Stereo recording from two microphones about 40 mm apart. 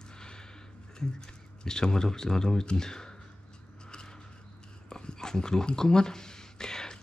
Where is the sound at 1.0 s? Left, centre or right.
Centre.